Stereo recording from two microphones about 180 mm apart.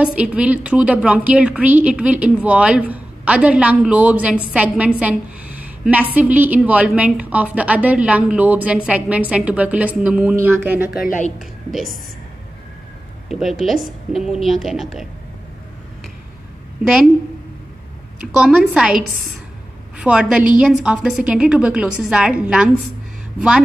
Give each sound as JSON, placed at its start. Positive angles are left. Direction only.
{"t": 0.0, "sound": "a woman's voice", "side_deg": -5}
{"t": 10.9, "sound": "a woman's voice", "side_deg": 55}
{"t": 13.3, "sound": "a woman's voice", "side_deg": 0}
{"t": 18.4, "sound": "a woman's voice", "side_deg": -5}